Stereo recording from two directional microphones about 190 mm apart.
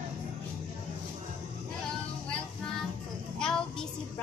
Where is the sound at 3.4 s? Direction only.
5° left (ahead or behind).